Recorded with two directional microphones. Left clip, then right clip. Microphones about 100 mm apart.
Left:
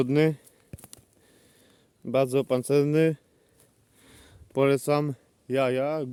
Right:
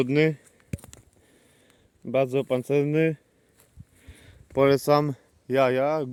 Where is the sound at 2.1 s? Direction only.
25° left (ahead or behind).